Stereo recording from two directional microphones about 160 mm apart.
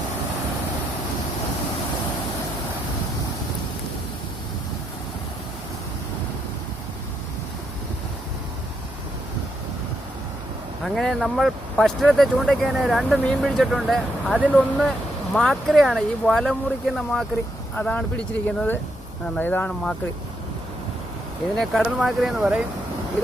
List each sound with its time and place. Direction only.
10.8 s speech: centre (ahead or behind)
21.6 s speech: centre (ahead or behind)